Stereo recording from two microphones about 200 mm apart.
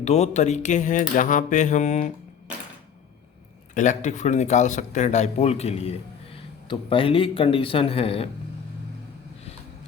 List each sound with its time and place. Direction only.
0.0 s speech: 35° left (ahead or behind)
3.8 s speech: 35° left (ahead or behind)